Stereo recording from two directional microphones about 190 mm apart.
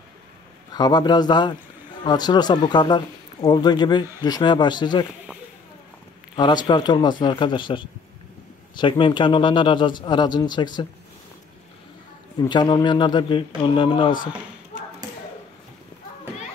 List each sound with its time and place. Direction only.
0.7 s a man's voice: 20° left (ahead or behind)
6.3 s a man's voice: 25° left (ahead or behind)
12.4 s a man's voice: 25° left (ahead or behind)